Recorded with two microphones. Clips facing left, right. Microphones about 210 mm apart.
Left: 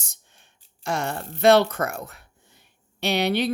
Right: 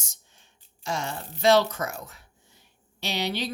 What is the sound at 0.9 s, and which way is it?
Speech, 60° left (ahead or behind).